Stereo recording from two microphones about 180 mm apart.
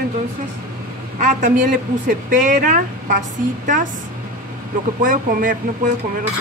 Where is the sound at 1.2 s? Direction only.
45° right (ahead or behind).